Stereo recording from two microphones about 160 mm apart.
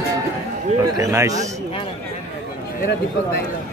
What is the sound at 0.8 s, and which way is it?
Speech, 20° right (ahead or behind).